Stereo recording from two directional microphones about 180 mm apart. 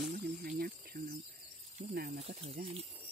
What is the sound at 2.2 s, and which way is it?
Speech, 35° right (ahead or behind).